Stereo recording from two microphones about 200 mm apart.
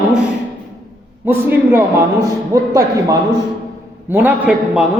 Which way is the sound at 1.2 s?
10° right (ahead or behind).